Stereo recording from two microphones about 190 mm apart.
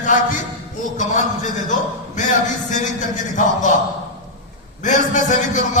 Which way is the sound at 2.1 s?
40° left (ahead or behind).